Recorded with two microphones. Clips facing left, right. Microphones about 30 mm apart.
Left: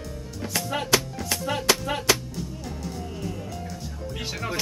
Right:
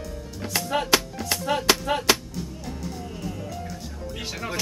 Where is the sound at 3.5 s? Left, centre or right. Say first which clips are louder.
Even; centre.